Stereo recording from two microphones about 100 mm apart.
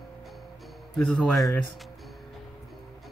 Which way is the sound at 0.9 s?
5° left (ahead or behind).